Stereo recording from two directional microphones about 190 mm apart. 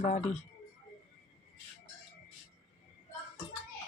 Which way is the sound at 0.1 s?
35° left (ahead or behind).